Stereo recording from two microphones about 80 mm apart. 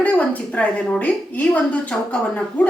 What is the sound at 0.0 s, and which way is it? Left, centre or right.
A woman's voice, centre.